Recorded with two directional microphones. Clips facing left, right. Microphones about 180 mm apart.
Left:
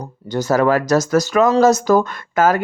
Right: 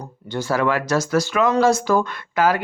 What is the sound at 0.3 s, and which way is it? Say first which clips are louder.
Speech: left 5 dB; 40° left (ahead or behind).